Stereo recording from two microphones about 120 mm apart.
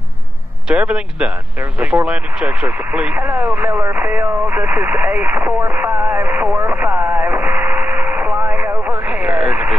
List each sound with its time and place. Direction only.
0.7 s speech: 10° right (ahead or behind)
7.2 s radio: 15° right (ahead or behind)